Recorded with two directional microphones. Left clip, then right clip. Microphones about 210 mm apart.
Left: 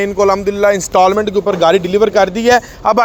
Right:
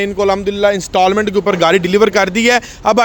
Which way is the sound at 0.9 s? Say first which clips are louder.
Left 2 dB; 20° right (ahead or behind).